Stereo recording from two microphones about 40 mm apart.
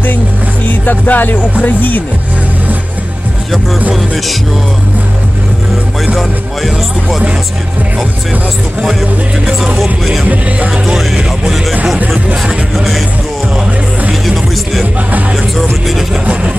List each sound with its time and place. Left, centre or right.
0.7 s speech: left
6.1 s speech: centre
11.1 s music: centre
12.7 s music: centre
14.2 s speech: centre